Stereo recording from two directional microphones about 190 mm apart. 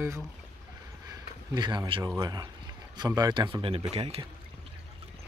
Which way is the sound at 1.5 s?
25° right (ahead or behind).